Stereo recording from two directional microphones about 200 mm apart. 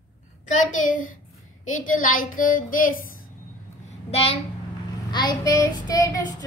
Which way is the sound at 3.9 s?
30° left (ahead or behind).